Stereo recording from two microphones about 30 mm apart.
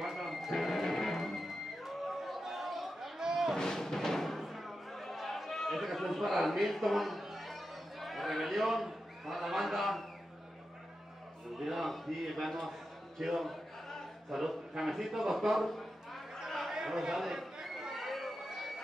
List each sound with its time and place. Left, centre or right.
0.0 s music: centre
2.4 s chatter: centre
3.2 s a sound: centre
3.5 s music: centre
4.4 s a sound: centre
8.8 s speech: centre
11.6 s a man's voice: centre
14.8 s a sound: centre
16.7 s chatter: centre